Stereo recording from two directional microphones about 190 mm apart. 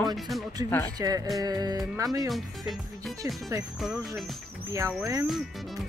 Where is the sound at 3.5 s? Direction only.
15° right (ahead or behind).